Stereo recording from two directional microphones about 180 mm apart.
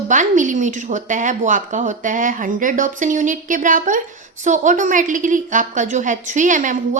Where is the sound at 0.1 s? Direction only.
45° right (ahead or behind).